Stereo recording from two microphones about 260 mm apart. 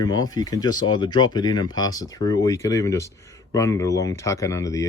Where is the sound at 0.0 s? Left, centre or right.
Centre.